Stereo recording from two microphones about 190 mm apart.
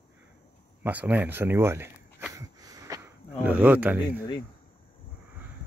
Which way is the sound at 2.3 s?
15° right (ahead or behind).